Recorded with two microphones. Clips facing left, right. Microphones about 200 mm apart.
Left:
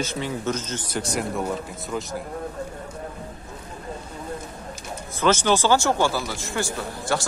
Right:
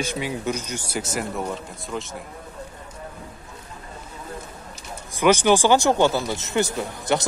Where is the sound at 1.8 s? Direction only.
Centre (ahead or behind).